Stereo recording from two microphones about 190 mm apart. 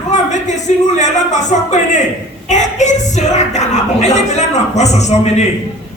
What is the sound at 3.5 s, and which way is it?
Speech, 35° left (ahead or behind).